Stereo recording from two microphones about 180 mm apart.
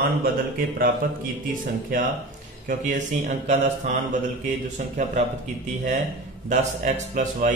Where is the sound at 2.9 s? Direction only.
40° right (ahead or behind).